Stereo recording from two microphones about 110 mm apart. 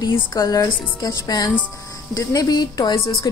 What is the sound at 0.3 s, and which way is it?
A woman's voice, 35° left (ahead or behind).